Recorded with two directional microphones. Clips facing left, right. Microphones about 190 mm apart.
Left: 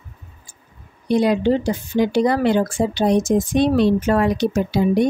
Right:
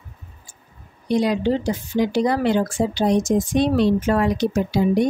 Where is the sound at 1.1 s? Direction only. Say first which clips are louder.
Left 3 dB; 55° left (ahead or behind).